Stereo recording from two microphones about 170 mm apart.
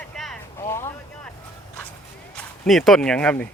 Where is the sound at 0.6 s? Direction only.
15° left (ahead or behind).